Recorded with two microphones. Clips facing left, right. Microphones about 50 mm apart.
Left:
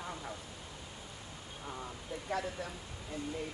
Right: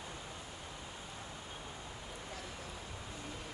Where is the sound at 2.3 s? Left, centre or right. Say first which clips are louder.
Left 14 dB; left.